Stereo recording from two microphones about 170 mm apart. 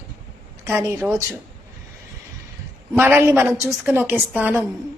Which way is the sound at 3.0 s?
10° right (ahead or behind).